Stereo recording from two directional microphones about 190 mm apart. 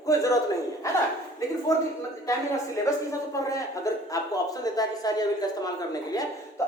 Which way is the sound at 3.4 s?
15° left (ahead or behind).